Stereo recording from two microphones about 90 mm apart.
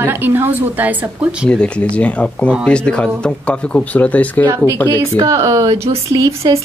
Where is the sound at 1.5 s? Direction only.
15° left (ahead or behind).